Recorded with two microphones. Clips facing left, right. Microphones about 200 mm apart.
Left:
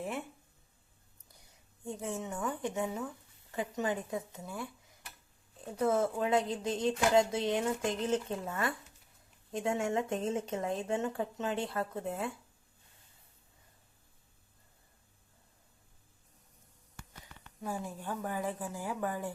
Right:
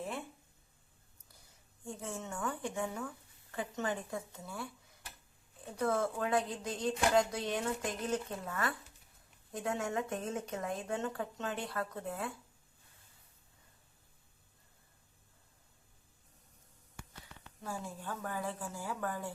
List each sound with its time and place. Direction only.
1.8 s speech: 20° left (ahead or behind)
5.8 s speech: 20° left (ahead or behind)
17.6 s a woman's voice: 15° left (ahead or behind)